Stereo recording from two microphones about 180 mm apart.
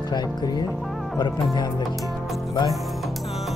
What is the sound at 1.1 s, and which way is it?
Speech, 25° left (ahead or behind).